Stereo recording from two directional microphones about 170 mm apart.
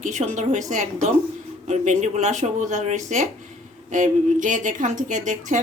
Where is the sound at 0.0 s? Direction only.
45° right (ahead or behind).